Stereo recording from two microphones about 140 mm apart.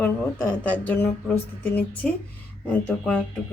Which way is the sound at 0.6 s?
10° left (ahead or behind).